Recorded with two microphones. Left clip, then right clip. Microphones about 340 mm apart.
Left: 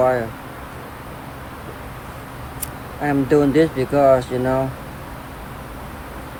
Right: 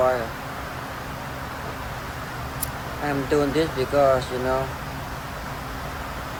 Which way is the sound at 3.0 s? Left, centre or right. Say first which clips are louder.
Left 6 dB; left.